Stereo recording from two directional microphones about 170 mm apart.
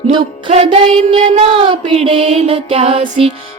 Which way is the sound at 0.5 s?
35° right (ahead or behind).